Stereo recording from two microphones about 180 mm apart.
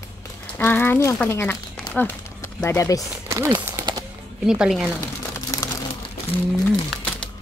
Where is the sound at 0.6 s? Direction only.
10° left (ahead or behind).